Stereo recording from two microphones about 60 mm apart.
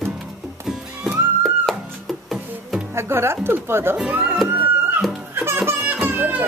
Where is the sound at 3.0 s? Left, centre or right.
Right.